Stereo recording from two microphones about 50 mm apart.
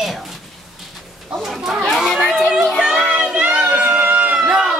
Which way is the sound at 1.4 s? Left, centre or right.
Centre.